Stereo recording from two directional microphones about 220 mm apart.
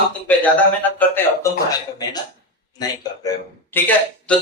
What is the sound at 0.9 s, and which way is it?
Speech, 10° left (ahead or behind).